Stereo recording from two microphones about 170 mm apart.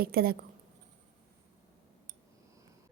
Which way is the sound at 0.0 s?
60° right (ahead or behind).